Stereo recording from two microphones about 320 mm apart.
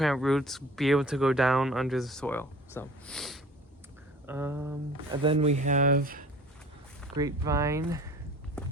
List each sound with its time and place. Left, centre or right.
0.0 s speech: centre; by 6.2 s right
7.2 s speech: centre
8.6 s walk: centre